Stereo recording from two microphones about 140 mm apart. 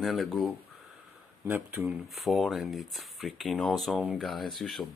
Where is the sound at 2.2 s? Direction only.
Centre (ahead or behind).